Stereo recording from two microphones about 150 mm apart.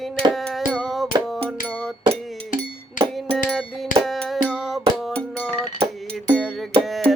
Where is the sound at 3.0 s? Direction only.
60° left (ahead or behind).